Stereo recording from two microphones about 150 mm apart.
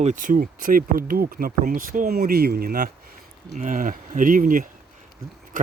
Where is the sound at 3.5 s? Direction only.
60° right (ahead or behind).